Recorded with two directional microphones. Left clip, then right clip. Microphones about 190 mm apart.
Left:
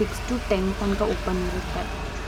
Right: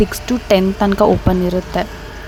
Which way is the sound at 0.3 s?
45° right (ahead or behind).